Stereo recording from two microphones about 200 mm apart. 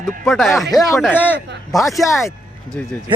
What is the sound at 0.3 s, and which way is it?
Speech, centre (ahead or behind).